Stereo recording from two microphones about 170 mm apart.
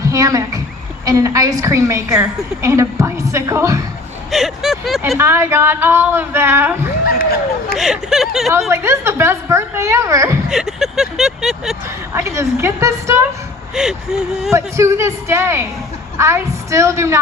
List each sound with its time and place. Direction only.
0.0 s a woman's voice: 20° right (ahead or behind)
4.3 s vehicle: centre (ahead or behind)
5.0 s speech: 15° right (ahead or behind)
7.0 s speech: 60° left (ahead or behind)
7.8 s vehicle: centre (ahead or behind)
8.7 s speech: 15° right (ahead or behind)
10.5 s vehicle: 5° right (ahead or behind)
12.1 s speech: 15° right (ahead or behind)
13.7 s vehicle: 5° right (ahead or behind)
14.5 s speech: 15° right (ahead or behind)